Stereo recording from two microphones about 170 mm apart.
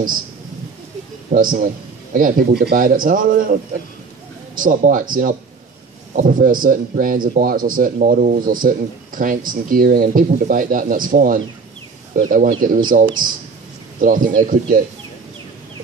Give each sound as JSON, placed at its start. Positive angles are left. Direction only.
{"t": 1.3, "sound": "a man's voice", "side_deg": -55}
{"t": 4.6, "sound": "speech", "side_deg": -50}
{"t": 13.9, "sound": "speech", "side_deg": -50}